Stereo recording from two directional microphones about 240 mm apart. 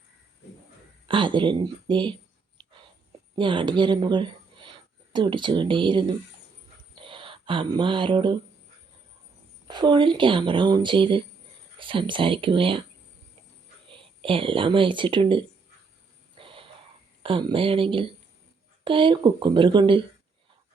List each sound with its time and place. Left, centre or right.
1.0 s speech: centre
2.6 s a sound: centre
3.3 s a woman's voice: centre
9.6 s speech: centre
13.9 s speech: right
16.4 s a sound: right
17.2 s speech: right